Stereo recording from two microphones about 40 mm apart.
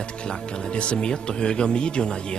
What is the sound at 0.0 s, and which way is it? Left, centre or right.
Speech, left.